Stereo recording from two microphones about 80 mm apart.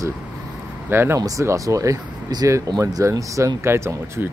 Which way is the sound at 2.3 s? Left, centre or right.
Right.